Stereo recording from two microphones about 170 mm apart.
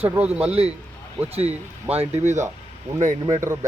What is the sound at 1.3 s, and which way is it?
Speech, 35° right (ahead or behind).